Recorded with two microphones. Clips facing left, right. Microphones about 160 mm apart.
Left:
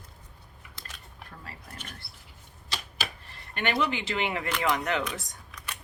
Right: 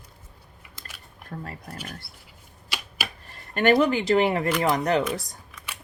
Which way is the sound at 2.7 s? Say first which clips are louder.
Right 1 dB; 10° right (ahead or behind).